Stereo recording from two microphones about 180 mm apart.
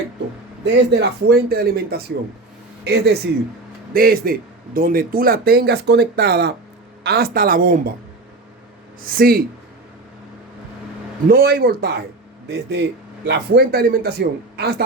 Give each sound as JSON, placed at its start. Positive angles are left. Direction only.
{"t": 0.6, "sound": "speech", "side_deg": -70}
{"t": 3.9, "sound": "speech", "side_deg": -55}
{"t": 9.0, "sound": "speech", "side_deg": -55}
{"t": 11.3, "sound": "speech", "side_deg": -55}